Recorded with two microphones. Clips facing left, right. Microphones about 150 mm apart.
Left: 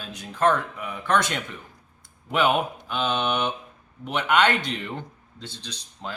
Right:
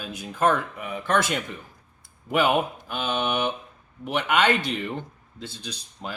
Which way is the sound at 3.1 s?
10° right (ahead or behind).